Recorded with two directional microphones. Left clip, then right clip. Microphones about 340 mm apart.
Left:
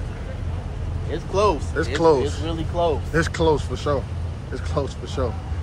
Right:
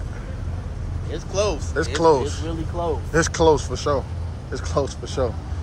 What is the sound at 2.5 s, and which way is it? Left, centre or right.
Speech, left.